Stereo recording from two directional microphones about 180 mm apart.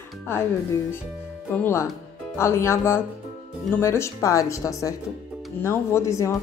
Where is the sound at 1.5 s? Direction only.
10° left (ahead or behind).